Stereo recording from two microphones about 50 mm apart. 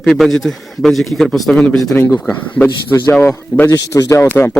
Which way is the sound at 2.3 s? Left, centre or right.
Left.